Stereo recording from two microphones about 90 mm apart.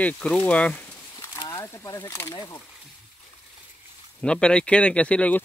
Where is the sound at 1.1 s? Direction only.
50° left (ahead or behind).